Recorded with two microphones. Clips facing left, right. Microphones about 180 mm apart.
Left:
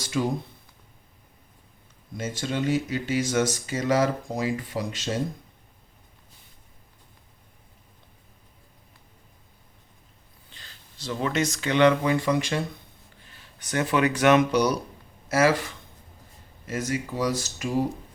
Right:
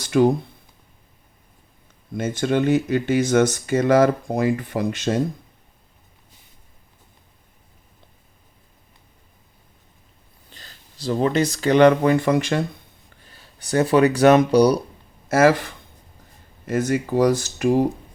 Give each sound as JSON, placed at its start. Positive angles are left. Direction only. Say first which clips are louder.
{"t": 0.0, "sound": "speech", "louder": "right 10 dB", "side_deg": -60}
{"t": 2.1, "sound": "speech", "louder": "right 8 dB", "side_deg": -60}
{"t": 10.5, "sound": "speech", "louder": "right 4 dB", "side_deg": -40}
{"t": 13.2, "sound": "speech", "louder": "right 3 dB", "side_deg": -35}
{"t": 15.3, "sound": "speech", "louder": "right 5 dB", "side_deg": -50}
{"t": 16.6, "sound": "speech", "louder": "right 7 dB", "side_deg": -55}